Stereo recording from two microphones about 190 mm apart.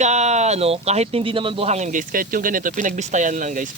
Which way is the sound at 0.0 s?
35° right (ahead or behind).